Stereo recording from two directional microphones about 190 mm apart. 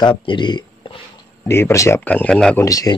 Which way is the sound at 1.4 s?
15° left (ahead or behind).